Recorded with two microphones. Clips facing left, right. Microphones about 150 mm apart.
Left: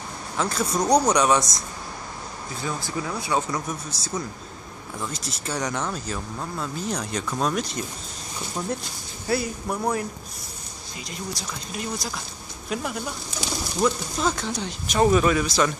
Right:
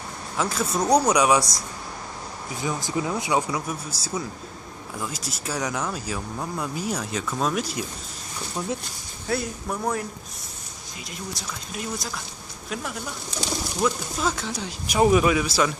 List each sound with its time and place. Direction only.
0.4 s speech: 5° right (ahead or behind)
2.5 s speech: 15° right (ahead or behind)
4.9 s speech: 5° right (ahead or behind)
9.3 s speech: centre (ahead or behind)
11.1 s speech: centre (ahead or behind)